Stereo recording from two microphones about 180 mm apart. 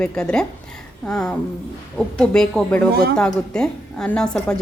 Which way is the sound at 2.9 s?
60° right (ahead or behind).